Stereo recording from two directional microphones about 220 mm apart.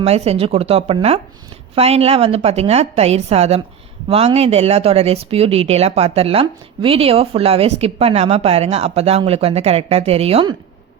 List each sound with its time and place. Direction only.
0.0 s speech: 30° right (ahead or behind)